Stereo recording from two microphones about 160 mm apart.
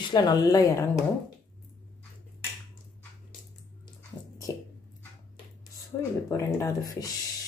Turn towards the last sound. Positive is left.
turn(degrees=20)  # may be behind; listen again after turning